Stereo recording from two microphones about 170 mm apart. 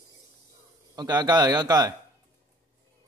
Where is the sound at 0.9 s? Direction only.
25° right (ahead or behind).